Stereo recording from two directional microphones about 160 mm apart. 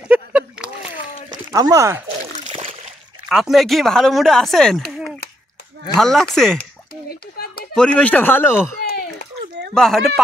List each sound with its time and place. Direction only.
0.1 s a sound: 10° right (ahead or behind)
1.5 s speech: 20° right (ahead or behind)
3.3 s speech: centre (ahead or behind)
5.9 s speech: centre (ahead or behind)
6.6 s a sound: 75° left (ahead or behind)
7.7 s speech: 5° left (ahead or behind)
9.8 s speech: centre (ahead or behind)